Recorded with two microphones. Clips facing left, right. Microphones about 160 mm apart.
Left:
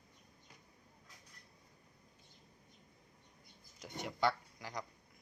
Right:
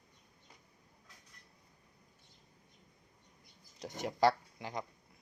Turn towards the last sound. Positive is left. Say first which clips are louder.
# right 4 dB
turn(degrees=-25)  # may be behind; listen again after turning